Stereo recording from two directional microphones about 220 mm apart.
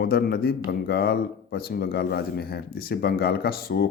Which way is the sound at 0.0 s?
45° left (ahead or behind).